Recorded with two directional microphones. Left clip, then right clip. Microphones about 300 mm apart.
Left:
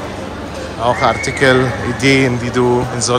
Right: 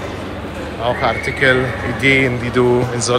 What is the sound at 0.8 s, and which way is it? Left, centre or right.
A man's voice, centre.